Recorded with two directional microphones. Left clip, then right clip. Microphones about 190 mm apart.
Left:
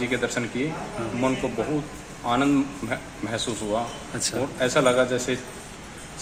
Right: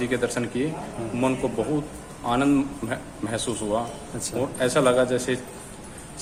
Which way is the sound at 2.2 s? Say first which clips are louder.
Even; 25° right (ahead or behind).